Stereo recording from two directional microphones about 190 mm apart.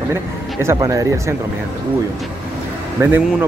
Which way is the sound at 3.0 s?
10° right (ahead or behind).